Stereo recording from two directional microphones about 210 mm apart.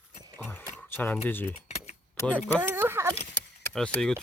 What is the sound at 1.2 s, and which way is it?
Speech, 10° left (ahead or behind).